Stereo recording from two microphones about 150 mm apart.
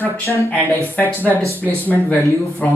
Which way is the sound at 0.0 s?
20° left (ahead or behind).